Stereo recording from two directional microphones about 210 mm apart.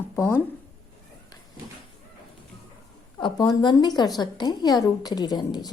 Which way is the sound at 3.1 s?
20° left (ahead or behind).